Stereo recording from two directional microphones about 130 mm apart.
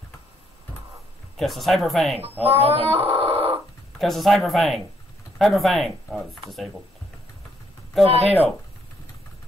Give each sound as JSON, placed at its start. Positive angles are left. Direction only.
{"t": 1.3, "sound": "speech", "side_deg": 0}
{"t": 2.6, "sound": "dog", "side_deg": -50}
{"t": 4.0, "sound": "speech", "side_deg": 0}
{"t": 8.0, "sound": "speech", "side_deg": -50}